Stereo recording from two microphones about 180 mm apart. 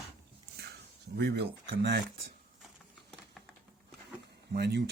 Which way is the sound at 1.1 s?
65° right (ahead or behind).